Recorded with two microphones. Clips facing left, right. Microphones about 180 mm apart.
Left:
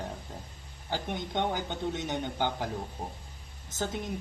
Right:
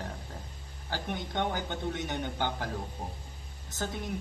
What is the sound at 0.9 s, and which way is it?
Speech, 20° left (ahead or behind).